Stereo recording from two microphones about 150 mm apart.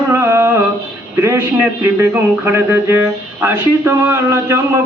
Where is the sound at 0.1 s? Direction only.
20° right (ahead or behind).